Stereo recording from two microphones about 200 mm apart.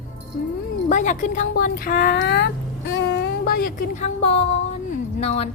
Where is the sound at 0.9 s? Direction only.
40° left (ahead or behind).